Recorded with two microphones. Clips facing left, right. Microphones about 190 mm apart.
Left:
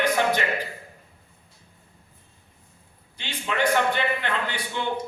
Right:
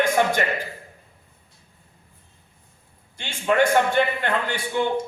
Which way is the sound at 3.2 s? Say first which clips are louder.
Right 6 dB; 50° right (ahead or behind).